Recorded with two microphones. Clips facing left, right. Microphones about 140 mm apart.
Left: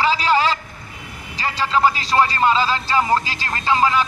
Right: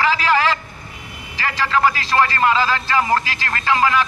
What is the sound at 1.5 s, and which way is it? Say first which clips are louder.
Speech: even; 25° left (ahead or behind).